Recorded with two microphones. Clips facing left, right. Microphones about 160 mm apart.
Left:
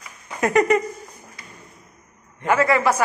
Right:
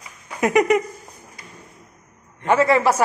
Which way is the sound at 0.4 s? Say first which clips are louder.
Right 1 dB; 10° right (ahead or behind).